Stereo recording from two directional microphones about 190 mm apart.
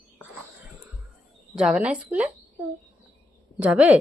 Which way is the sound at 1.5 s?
5° right (ahead or behind).